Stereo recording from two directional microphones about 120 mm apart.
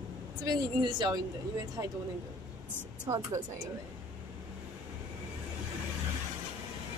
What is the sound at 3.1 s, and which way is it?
Speech, 35° right (ahead or behind).